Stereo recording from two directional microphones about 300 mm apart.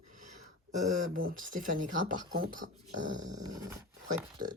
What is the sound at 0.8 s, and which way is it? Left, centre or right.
Speech, right.